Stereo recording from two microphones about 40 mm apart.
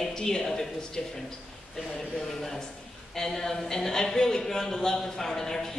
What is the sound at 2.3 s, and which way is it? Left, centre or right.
Speech, centre.